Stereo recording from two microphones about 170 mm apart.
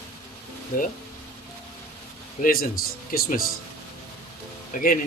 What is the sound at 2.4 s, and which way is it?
Speech, 60° left (ahead or behind).